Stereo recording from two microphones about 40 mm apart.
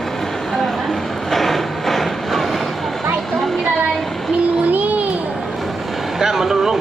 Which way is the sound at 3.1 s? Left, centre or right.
Centre.